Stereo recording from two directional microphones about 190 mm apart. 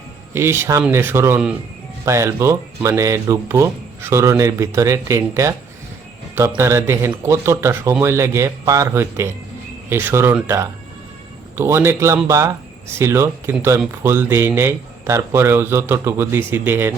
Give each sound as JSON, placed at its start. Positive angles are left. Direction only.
{"t": 0.3, "sound": "speech", "side_deg": -15}